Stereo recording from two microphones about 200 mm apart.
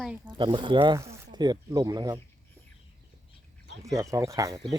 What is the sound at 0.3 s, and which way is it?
Speech, 25° right (ahead or behind).